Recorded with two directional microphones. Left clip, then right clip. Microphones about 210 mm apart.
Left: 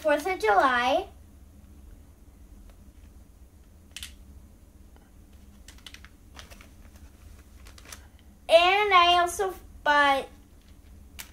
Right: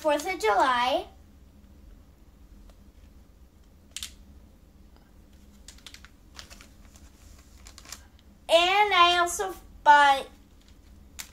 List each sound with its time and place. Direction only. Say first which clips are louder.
0.0 s child singing: left 1 dB; centre (ahead or behind)
6.0 s typing: right 1 dB; 5° left (ahead or behind)
7.7 s a sound: right 1 dB; 5° right (ahead or behind)
8.5 s child singing: left 1 dB; centre (ahead or behind)